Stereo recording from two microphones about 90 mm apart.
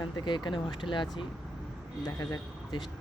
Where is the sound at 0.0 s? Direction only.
55° left (ahead or behind).